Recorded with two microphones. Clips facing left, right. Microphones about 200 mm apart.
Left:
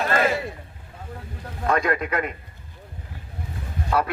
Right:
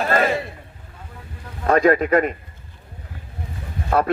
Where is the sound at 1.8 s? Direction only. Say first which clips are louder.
Right 8 dB; 55° right (ahead or behind).